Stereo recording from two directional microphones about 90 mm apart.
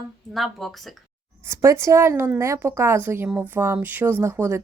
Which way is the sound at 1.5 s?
35° right (ahead or behind).